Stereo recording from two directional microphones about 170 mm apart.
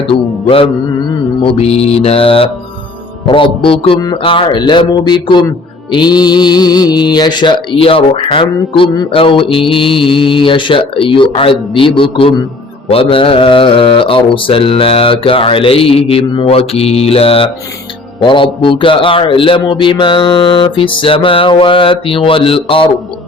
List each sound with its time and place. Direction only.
0.1 s music: 30° left (ahead or behind)
1.5 s a man's voice: 35° left (ahead or behind)
3.2 s music: 30° left (ahead or behind)
12.9 s a man's voice: 30° left (ahead or behind)